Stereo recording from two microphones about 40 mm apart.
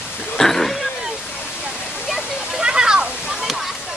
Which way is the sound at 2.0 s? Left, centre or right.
Centre.